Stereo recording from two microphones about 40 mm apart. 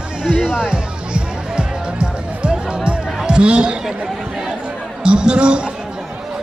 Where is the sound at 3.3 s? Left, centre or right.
Right.